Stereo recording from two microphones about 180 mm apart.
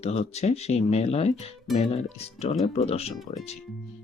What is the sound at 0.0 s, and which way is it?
Speech, 35° left (ahead or behind).